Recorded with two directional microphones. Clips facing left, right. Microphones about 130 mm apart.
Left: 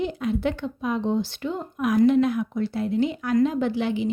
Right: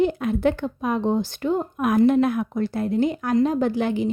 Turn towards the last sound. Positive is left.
turn(degrees=-45)  # may be behind; listen again after turning